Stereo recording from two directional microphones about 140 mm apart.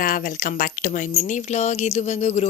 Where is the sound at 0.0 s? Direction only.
80° left.